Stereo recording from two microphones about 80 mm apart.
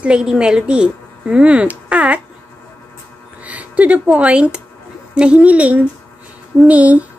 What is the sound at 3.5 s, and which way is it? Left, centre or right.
A woman's voice, centre.